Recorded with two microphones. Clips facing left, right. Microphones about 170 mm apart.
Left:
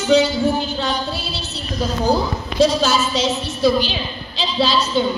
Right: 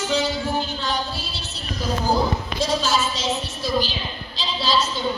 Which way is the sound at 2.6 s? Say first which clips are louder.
Left 7 dB; 70° left (ahead or behind).